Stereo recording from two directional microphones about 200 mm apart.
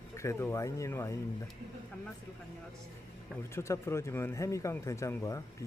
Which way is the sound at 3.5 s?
15° left (ahead or behind).